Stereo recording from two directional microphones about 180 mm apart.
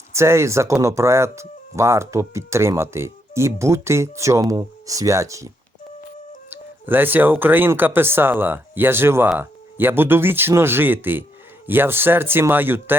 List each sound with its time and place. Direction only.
0.1 s speech: 15° right (ahead or behind)
6.5 s speech: 10° right (ahead or behind)